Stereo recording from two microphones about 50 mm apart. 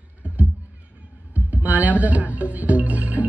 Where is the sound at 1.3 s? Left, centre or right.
Right.